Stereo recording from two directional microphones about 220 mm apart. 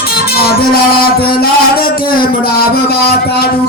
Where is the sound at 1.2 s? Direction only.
45° left (ahead or behind).